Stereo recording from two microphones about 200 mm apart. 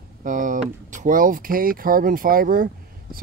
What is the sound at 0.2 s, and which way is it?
Speech, 40° right (ahead or behind).